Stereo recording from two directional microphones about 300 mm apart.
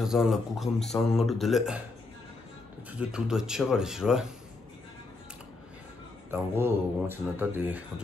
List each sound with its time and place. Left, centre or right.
0.0 s speech: centre
3.0 s speech: centre
6.3 s speech: centre